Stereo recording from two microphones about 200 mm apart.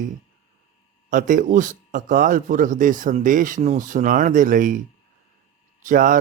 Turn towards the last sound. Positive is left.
turn(degrees=-40)  # may be behind; listen again after turning